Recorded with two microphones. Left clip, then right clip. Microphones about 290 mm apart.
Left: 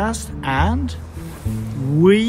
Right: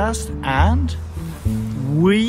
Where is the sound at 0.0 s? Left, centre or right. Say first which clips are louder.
Right 1 dB; centre.